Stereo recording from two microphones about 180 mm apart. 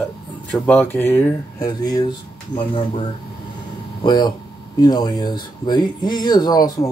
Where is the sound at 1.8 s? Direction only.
25° left (ahead or behind).